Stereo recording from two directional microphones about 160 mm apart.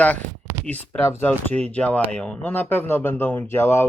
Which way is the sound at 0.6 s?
10° left (ahead or behind).